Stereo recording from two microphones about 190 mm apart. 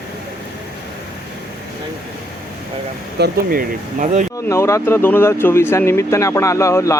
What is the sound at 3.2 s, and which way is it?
Speech, 45° right (ahead or behind).